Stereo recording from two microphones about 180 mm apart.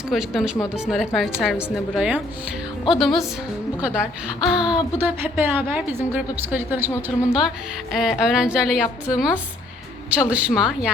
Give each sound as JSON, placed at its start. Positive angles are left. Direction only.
{"t": 0.1, "sound": "a woman's voice", "side_deg": 0}
{"t": 4.4, "sound": "a woman's voice", "side_deg": -5}
{"t": 6.9, "sound": "a woman's voice", "side_deg": 15}
{"t": 7.9, "sound": "a woman's voice", "side_deg": -5}